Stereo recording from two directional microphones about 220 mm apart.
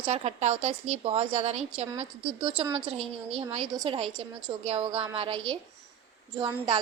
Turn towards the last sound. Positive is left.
turn(degrees=-25)  # may be behind; listen again after turning